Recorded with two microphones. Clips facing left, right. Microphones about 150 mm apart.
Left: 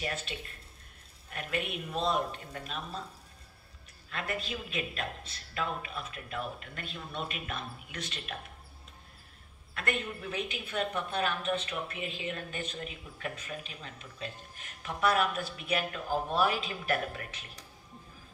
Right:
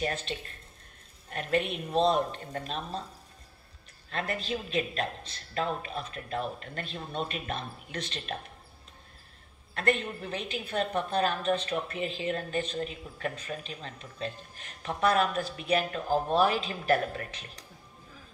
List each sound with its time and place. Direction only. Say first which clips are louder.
0.0 s a woman's voice: right 5 dB; 35° right (ahead or behind)
4.1 s a woman's voice: right 4 dB; 35° right (ahead or behind)
10.2 s a woman's voice: right 1 dB; 35° right (ahead or behind)